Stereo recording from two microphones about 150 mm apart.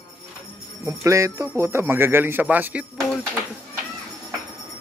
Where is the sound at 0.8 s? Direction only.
20° right (ahead or behind).